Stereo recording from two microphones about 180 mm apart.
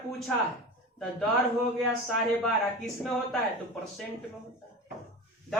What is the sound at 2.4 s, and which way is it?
Speech, centre (ahead or behind).